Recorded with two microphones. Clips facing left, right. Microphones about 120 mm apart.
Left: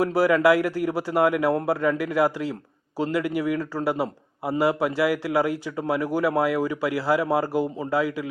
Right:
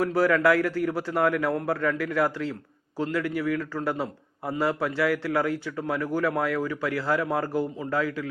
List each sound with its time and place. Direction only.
0.0 s a man's voice: 10° left (ahead or behind)